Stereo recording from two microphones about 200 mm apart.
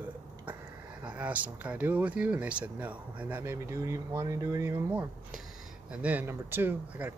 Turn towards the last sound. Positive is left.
turn(degrees=-10)  # may be behind; listen again after turning